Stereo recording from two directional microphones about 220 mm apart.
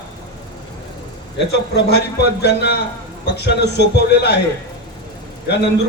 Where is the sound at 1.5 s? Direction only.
50° left (ahead or behind).